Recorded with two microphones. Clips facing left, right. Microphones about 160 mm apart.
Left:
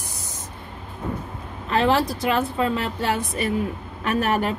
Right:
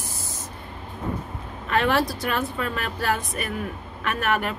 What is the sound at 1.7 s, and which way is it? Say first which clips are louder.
A woman's voice: left 2 dB; 30° left (ahead or behind).